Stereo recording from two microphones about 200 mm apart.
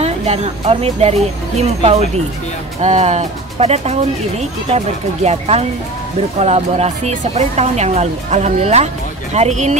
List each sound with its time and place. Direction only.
0.0 s speech: 30° right (ahead or behind)